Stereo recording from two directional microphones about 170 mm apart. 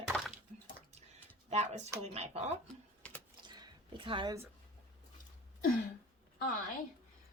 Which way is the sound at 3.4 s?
25° right (ahead or behind).